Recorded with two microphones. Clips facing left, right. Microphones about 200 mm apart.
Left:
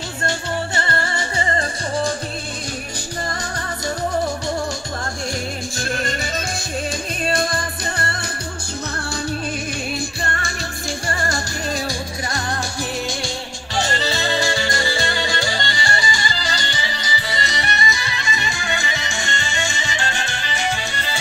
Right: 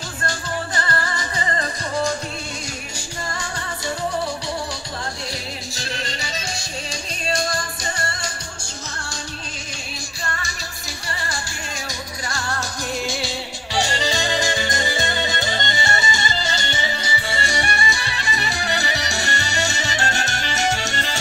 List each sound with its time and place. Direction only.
0.2 s music: 25° left (ahead or behind)
5.8 s music: 50° left (ahead or behind)
10.2 s music: 55° left (ahead or behind); by 12.0 s 40° left (ahead or behind)
12.3 s music: 20° left (ahead or behind)
13.7 s music: 15° right (ahead or behind); by 21.0 s 45° right (ahead or behind)